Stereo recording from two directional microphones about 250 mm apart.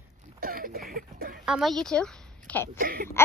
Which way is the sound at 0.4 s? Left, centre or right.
Right.